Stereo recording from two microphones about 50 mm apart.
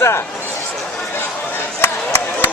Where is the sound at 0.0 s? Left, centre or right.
Left.